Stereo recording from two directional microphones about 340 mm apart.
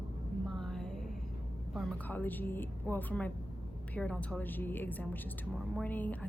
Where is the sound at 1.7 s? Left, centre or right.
Centre.